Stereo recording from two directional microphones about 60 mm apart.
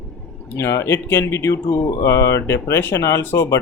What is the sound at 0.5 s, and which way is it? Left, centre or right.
Speech, left.